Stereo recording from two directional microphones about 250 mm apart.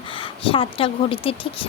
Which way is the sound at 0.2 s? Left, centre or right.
Left.